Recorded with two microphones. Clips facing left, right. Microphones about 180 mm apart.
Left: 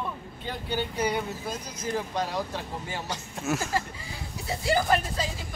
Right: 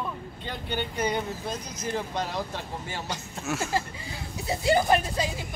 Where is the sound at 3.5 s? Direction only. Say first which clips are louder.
Left 2 dB; 5° left (ahead or behind).